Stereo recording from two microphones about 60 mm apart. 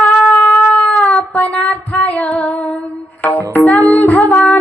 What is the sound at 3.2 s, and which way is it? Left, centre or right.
Music, left.